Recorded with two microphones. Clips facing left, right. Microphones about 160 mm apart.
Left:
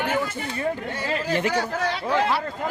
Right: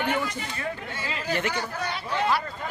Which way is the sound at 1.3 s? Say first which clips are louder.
Left 4 dB; 35° left (ahead or behind).